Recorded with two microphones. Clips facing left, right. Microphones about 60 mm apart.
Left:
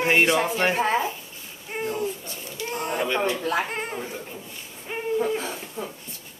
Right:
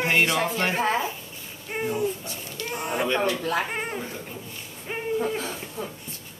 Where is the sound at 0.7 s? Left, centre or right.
Centre.